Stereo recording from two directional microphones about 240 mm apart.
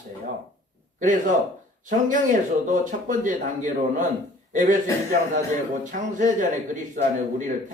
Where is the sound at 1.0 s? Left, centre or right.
Right.